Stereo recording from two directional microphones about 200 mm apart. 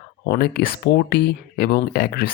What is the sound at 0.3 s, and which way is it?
Speech, 50° left (ahead or behind).